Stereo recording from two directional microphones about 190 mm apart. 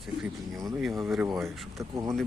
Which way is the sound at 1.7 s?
15° right (ahead or behind).